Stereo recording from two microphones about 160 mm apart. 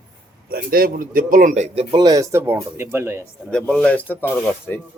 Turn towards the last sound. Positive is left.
turn(degrees=10)  # may be behind; listen again after turning